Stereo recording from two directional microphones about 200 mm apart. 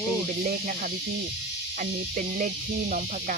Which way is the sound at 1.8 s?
40° right (ahead or behind).